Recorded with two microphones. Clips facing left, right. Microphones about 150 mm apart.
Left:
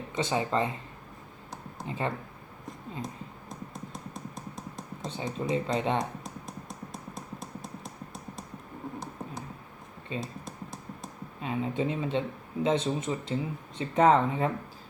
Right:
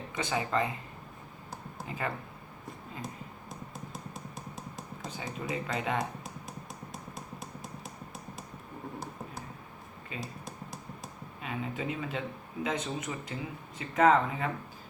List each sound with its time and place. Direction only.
0.2 s speech: 25° left (ahead or behind)
1.9 s speech: 25° left (ahead or behind)
5.0 s speech: 25° left (ahead or behind)
10.1 s speech: 30° left (ahead or behind)
11.3 s speech: 30° left (ahead or behind)